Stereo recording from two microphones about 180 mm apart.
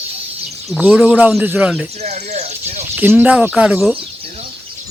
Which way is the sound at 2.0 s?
40° right (ahead or behind).